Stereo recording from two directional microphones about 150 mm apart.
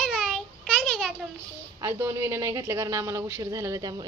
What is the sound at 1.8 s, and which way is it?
A woman's voice, 15° right (ahead or behind).